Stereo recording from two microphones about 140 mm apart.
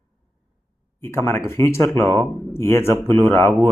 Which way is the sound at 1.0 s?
20° left (ahead or behind).